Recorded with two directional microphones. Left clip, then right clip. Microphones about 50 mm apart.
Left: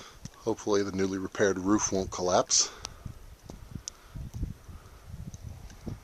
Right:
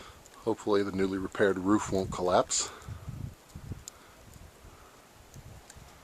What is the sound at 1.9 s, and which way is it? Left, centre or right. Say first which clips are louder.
Speech: even; left.